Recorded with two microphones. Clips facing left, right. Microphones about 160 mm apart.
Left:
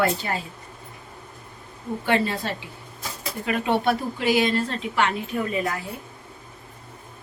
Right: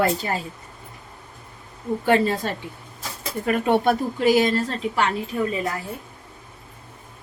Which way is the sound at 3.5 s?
45° right (ahead or behind).